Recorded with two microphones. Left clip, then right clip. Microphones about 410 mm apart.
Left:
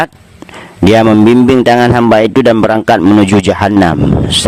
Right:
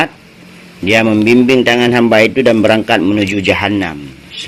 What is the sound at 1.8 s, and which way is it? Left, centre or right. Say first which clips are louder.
Speech: left 3 dB; left.